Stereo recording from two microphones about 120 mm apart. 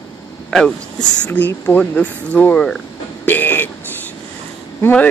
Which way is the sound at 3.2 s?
15° left (ahead or behind).